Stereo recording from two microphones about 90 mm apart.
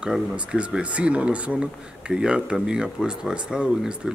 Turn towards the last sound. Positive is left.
turn(degrees=-10)  # may be behind; listen again after turning